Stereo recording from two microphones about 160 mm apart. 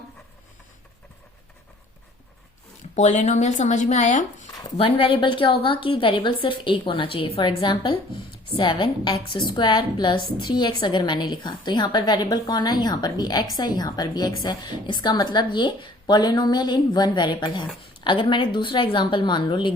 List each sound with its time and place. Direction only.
2.9 s speech: 50° left (ahead or behind)
4.8 s a woman's voice: 35° left (ahead or behind)